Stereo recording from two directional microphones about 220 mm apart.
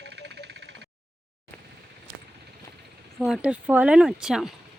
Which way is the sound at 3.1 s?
5° right (ahead or behind).